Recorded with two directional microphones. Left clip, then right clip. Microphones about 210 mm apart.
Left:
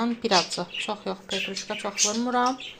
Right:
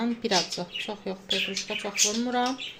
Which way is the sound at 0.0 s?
Centre (ahead or behind).